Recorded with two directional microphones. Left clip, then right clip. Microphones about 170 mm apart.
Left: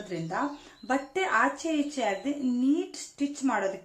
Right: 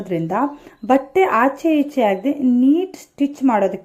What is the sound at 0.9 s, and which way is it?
A woman's voice, 35° right (ahead or behind).